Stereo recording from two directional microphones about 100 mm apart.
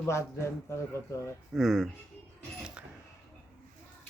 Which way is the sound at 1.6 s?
Centre (ahead or behind).